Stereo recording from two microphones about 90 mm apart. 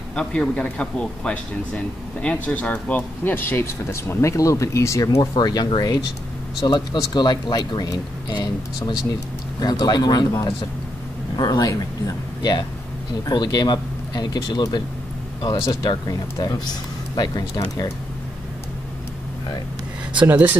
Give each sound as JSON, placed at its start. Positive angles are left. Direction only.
{"t": 0.1, "sound": "speech", "side_deg": 10}
{"t": 5.4, "sound": "speech", "side_deg": 50}
{"t": 15.5, "sound": "speech", "side_deg": 40}
{"t": 20.2, "sound": "speech", "side_deg": -20}